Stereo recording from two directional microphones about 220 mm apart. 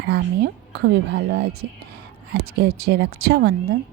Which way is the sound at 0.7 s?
50° right (ahead or behind).